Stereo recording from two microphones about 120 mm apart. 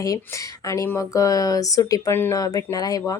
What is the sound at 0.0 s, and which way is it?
A woman's voice, 30° left (ahead or behind).